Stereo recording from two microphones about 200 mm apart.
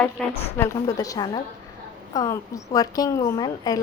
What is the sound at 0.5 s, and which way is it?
A woman's voice, 15° left (ahead or behind).